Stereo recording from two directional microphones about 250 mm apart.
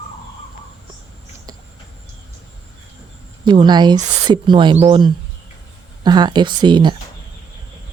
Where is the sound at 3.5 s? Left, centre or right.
Centre.